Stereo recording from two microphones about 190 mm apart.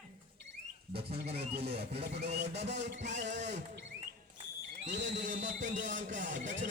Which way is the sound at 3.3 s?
40° right (ahead or behind).